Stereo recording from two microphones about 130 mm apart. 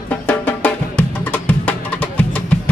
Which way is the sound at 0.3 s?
15° left (ahead or behind).